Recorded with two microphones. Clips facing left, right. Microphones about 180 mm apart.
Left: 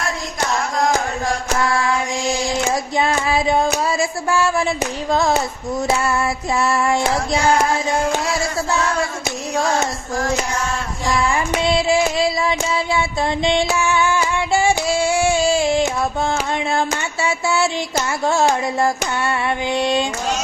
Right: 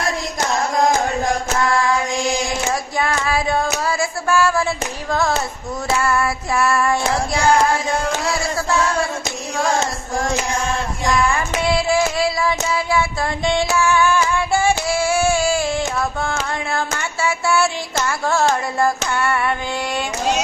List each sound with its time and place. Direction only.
3.0 s child singing: 25° left (ahead or behind)
5.1 s female singing: 20° left (ahead or behind)
11.0 s child singing: 20° left (ahead or behind)
17.2 s a sound: 20° left (ahead or behind)